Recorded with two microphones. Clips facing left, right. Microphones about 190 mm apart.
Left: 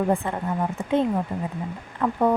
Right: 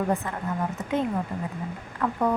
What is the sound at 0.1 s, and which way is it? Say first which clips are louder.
A woman's voice: left 3 dB; 30° left (ahead or behind).